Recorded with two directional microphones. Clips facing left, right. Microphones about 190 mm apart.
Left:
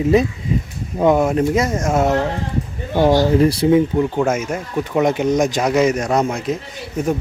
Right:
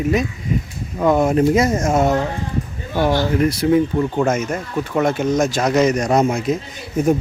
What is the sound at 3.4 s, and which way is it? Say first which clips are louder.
Speech: left 2 dB; 30° left (ahead or behind).